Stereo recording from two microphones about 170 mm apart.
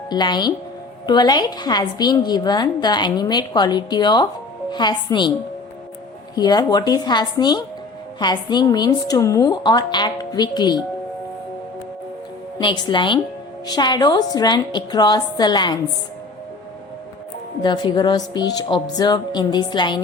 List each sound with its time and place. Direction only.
0.1 s a woman's voice: 25° left (ahead or behind)
6.3 s a woman's voice: 25° left (ahead or behind)
12.5 s a woman's voice: 25° left (ahead or behind)
17.6 s a woman's voice: 25° left (ahead or behind)